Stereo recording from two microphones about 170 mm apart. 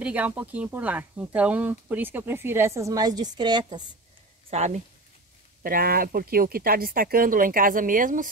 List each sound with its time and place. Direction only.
0.0 s speech: 10° right (ahead or behind); by 3.8 s 25° right (ahead or behind)
4.5 s speech: 40° right (ahead or behind)
5.6 s speech: 60° right (ahead or behind)